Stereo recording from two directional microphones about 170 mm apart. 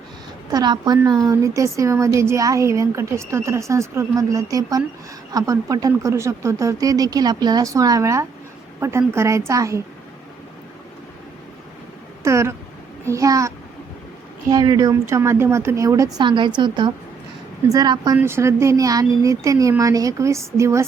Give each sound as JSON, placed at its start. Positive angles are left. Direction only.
{"t": 0.5, "sound": "a woman's voice", "side_deg": -25}
{"t": 12.2, "sound": "a sound", "side_deg": -15}
{"t": 13.1, "sound": "a woman's voice", "side_deg": -20}
{"t": 14.5, "sound": "a woman's voice", "side_deg": -20}